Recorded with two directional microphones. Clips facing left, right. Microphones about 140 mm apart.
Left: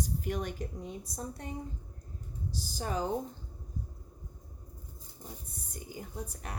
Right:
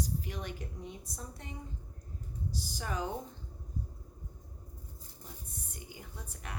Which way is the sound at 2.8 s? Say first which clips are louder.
Left 4 dB; 35° left (ahead or behind).